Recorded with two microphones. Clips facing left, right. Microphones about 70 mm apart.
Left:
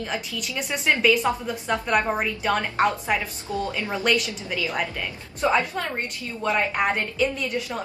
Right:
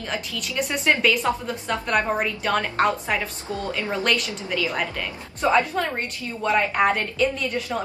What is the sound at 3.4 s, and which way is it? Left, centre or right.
Speech, right.